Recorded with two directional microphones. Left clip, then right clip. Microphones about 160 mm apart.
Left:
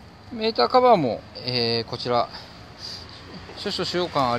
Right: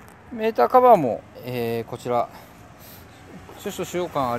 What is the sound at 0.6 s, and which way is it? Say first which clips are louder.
Speech: right 2 dB; 15° right (ahead or behind).